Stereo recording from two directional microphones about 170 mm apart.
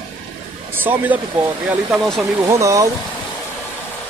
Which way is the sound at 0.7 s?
10° right (ahead or behind).